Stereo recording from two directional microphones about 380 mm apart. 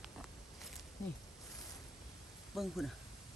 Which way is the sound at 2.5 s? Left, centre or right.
Centre.